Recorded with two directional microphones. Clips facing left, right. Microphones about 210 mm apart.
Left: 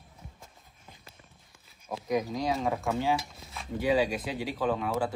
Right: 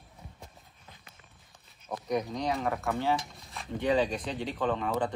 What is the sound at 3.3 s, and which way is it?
Speech, centre (ahead or behind).